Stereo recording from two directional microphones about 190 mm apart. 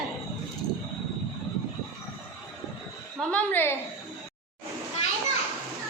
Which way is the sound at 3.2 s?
5° left (ahead or behind).